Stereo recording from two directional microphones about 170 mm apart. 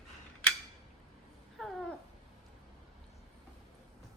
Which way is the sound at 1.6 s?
Centre (ahead or behind).